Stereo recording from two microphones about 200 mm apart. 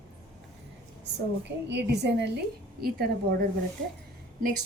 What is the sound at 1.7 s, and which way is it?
A woman's voice, 55° right (ahead or behind).